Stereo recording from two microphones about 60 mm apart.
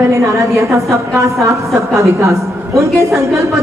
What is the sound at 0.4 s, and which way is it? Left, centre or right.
A woman's voice, right.